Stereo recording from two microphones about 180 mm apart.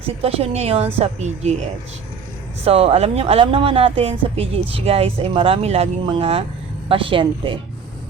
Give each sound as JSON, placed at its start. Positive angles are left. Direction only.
{"t": 0.2, "sound": "speech", "side_deg": -35}
{"t": 2.6, "sound": "speech", "side_deg": -35}